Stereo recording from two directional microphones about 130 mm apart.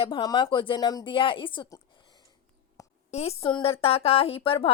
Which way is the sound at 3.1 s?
55° left (ahead or behind).